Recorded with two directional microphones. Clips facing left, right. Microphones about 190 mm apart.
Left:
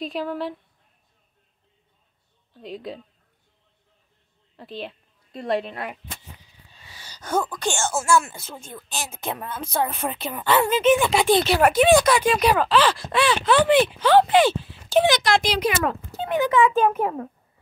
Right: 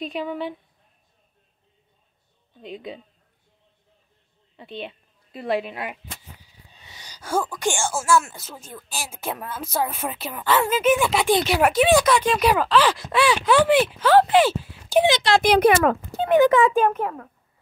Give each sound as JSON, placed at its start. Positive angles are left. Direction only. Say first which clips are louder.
{"t": 0.0, "sound": "speech", "louder": "even", "side_deg": 0}
{"t": 2.6, "sound": "speech", "louder": "left 1 dB", "side_deg": 0}
{"t": 4.6, "sound": "a woman's voice", "louder": "even", "side_deg": 0}
{"t": 6.7, "sound": "speech", "louder": "even", "side_deg": -20}
{"t": 15.0, "sound": "speech", "louder": "right 1 dB", "side_deg": -25}
{"t": 15.4, "sound": "speech", "louder": "right 7 dB", "side_deg": -55}